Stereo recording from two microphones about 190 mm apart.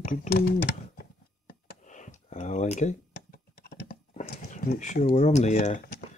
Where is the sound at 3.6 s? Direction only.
50° left (ahead or behind).